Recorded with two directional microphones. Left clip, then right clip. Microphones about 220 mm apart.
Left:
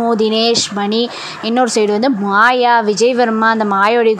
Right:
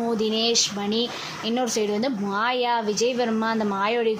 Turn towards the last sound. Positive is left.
turn(degrees=25)  # may be behind; listen again after turning